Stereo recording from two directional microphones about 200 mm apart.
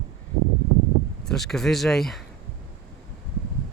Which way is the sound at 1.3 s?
Centre (ahead or behind).